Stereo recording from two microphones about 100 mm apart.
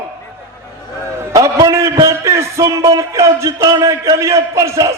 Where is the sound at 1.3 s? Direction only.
35° right (ahead or behind).